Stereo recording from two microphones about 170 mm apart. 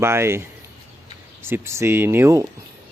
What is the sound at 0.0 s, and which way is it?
Speech, 15° right (ahead or behind).